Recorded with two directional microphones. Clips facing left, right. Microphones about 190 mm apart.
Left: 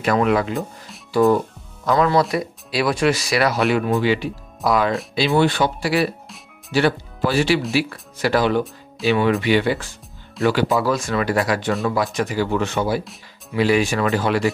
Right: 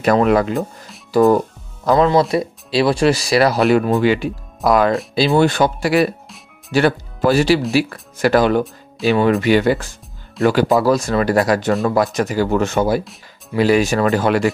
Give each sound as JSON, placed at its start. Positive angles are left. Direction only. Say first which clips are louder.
{"t": 0.0, "sound": "speech", "louder": "right 4 dB", "side_deg": -40}
{"t": 0.6, "sound": "speech", "louder": "right 4 dB", "side_deg": 0}
{"t": 1.1, "sound": "speech", "louder": "right 3 dB", "side_deg": -40}
{"t": 1.9, "sound": "speech", "louder": "right 4 dB", "side_deg": -25}
{"t": 4.0, "sound": "speech", "louder": "right 4 dB", "side_deg": -50}
{"t": 9.0, "sound": "speech", "louder": "right 3 dB", "side_deg": 0}
{"t": 9.4, "sound": "speech", "louder": "right 4 dB", "side_deg": -45}